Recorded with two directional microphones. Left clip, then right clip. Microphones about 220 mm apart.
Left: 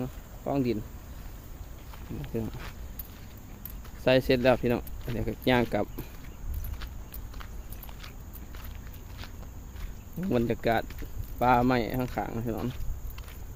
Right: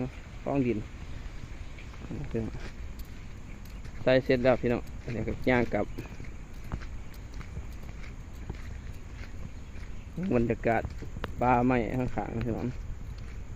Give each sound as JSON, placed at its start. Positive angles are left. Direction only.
{"t": 0.0, "sound": "a sound", "side_deg": 15}
{"t": 4.0, "sound": "speech", "side_deg": 35}
{"t": 10.2, "sound": "speech", "side_deg": 15}